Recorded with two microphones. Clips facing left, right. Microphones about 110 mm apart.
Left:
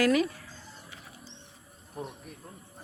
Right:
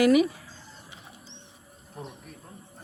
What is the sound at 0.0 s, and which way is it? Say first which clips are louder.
Speech: right 5 dB; 15° right (ahead or behind).